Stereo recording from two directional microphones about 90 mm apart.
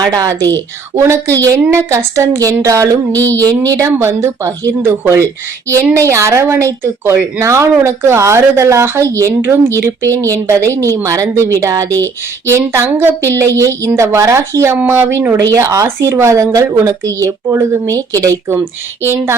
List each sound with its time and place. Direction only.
0.0 s speech: 45° right (ahead or behind)
0.9 s a woman's voice: 35° right (ahead or behind)
3.3 s speech: 20° left (ahead or behind)
3.7 s a woman's voice: 35° right (ahead or behind)
3.9 s a woman's voice: 25° right (ahead or behind)